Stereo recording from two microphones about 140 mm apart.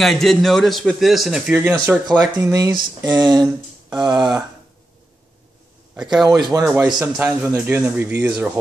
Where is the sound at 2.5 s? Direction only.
25° right (ahead or behind).